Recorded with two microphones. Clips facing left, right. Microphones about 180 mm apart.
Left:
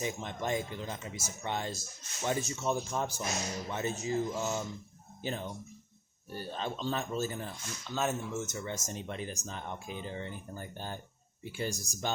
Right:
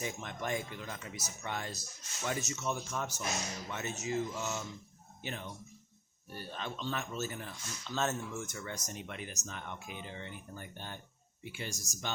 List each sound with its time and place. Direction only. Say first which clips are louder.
0.0 s speech: left 3 dB; 25° left (ahead or behind)
7.9 s speech: left 2 dB; 10° left (ahead or behind)
8.4 s speech: left 4 dB; 25° left (ahead or behind)